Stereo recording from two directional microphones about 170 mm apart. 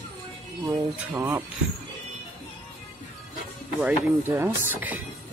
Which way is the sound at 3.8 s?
15° right (ahead or behind).